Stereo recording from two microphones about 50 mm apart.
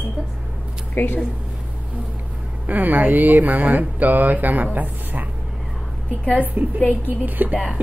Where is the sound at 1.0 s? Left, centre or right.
Left.